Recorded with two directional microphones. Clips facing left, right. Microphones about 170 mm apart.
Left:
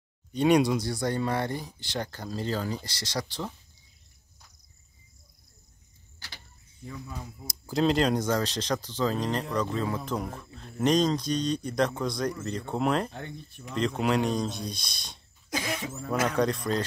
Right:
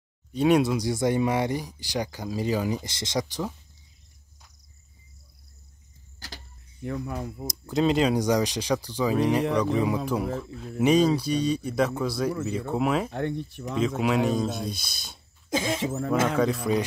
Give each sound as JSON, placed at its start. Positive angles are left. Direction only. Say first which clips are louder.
{"t": 0.3, "sound": "speech", "louder": "right 1 dB", "side_deg": 0}
{"t": 0.8, "sound": "speech", "louder": "right 5 dB", "side_deg": -20}
{"t": 6.1, "sound": "vehicle", "louder": "right 6 dB", "side_deg": -40}
{"t": 6.8, "sound": "speech", "louder": "right 9 dB", "side_deg": -65}
{"t": 7.4, "sound": "speech", "louder": "right 1 dB", "side_deg": 0}
{"t": 13.1, "sound": "speech", "louder": "right 11 dB", "side_deg": -65}
{"t": 13.7, "sound": "speech", "louder": "right 2 dB", "side_deg": -5}
{"t": 15.5, "sound": "speech", "louder": "right 5 dB", "side_deg": -25}
{"t": 15.8, "sound": "speech", "louder": "right 9 dB", "side_deg": -70}
{"t": 16.4, "sound": "speech", "louder": "even", "side_deg": -5}